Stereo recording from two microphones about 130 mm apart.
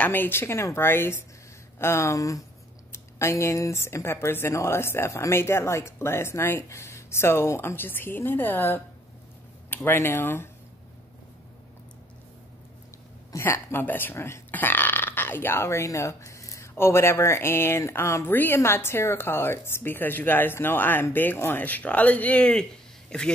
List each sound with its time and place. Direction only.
0.0 s speech: 15° left (ahead or behind)
13.3 s speech: 20° left (ahead or behind)